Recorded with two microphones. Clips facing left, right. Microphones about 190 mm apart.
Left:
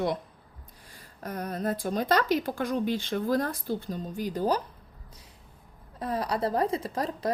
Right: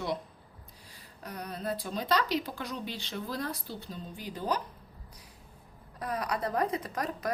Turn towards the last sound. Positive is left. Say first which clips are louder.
# left 4 dB
turn(degrees=30)  # may be behind; listen again after turning